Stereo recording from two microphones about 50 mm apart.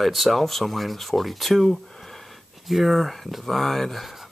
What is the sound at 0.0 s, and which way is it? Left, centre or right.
Speech, centre.